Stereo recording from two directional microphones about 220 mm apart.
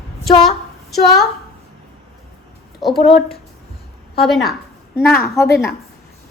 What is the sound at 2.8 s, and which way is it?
Speech, centre (ahead or behind).